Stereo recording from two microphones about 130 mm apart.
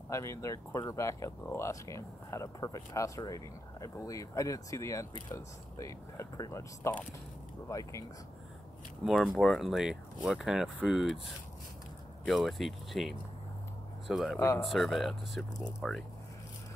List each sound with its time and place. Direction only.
0.1 s speech: 25° left (ahead or behind)
9.0 s speech: centre (ahead or behind)